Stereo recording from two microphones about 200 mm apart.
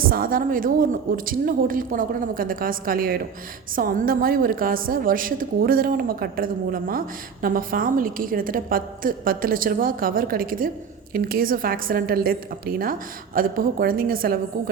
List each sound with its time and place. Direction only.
0.0 s a woman's voice: 45° right (ahead or behind)